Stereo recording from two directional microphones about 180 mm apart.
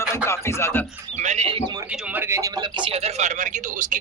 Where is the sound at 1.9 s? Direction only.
10° right (ahead or behind).